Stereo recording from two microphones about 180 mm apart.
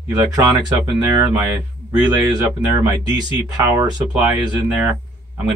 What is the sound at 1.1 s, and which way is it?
Speech, 15° right (ahead or behind).